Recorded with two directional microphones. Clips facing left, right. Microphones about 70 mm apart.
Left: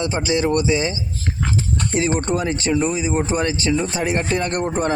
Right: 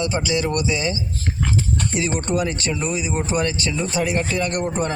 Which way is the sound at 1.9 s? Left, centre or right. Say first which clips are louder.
Left 3 dB; left.